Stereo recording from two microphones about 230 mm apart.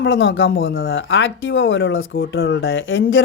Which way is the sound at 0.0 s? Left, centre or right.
Left.